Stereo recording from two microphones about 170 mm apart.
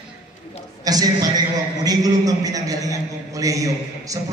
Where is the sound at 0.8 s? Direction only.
20° right (ahead or behind).